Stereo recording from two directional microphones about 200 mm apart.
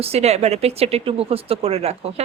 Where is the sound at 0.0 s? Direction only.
30° right (ahead or behind).